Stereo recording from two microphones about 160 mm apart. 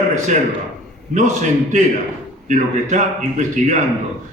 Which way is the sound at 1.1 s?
50° right (ahead or behind).